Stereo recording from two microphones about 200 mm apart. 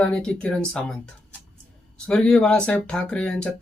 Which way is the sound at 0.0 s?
5° left (ahead or behind).